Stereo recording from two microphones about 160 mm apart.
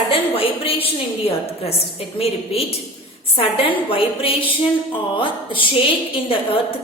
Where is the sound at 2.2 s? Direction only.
40° left (ahead or behind).